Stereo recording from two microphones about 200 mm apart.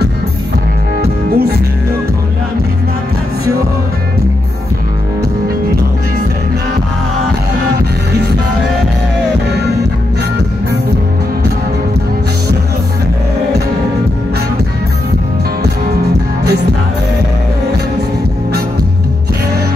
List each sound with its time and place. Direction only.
1.0 s music: 50° right (ahead or behind)